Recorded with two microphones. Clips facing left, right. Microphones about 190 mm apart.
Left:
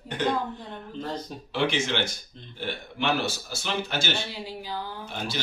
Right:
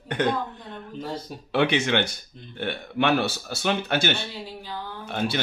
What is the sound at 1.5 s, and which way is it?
Speech, 60° right (ahead or behind).